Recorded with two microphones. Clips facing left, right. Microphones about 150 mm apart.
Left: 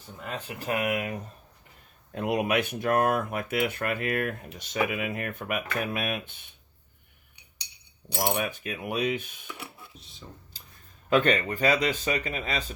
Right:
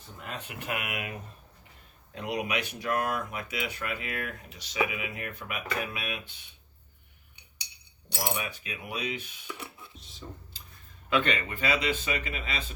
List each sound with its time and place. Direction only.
0.3 s speech: 35° left (ahead or behind)
2.1 s speech: 55° left (ahead or behind)
8.3 s speech: 50° left (ahead or behind)
9.5 s a sound: centre (ahead or behind)
11.1 s speech: 45° left (ahead or behind)